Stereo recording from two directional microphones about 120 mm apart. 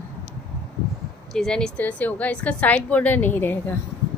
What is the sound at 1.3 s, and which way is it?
A woman's voice, 5° left (ahead or behind).